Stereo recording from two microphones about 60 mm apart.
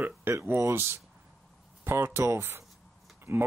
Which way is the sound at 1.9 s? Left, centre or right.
Right.